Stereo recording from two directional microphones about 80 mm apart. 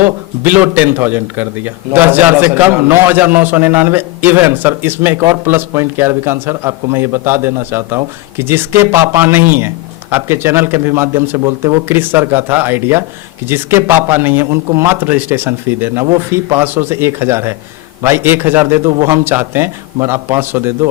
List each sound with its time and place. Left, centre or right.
0.0 s a man's voice: right